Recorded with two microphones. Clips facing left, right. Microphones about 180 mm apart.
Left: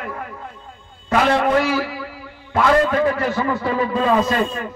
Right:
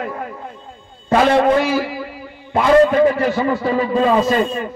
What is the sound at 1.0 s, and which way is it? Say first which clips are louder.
Speech: right 4 dB; 30° right (ahead or behind).